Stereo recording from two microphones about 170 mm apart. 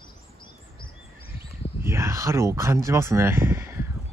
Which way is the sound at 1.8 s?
15° right (ahead or behind).